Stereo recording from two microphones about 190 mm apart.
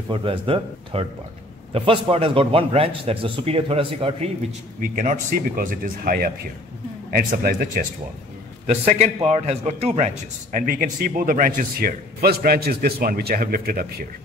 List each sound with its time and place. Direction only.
0.1 s a man's voice: 30° right (ahead or behind)
4.8 s a man's voice: 45° right (ahead or behind)
8.6 s a man's voice: 35° right (ahead or behind); by 14.0 s 50° right (ahead or behind)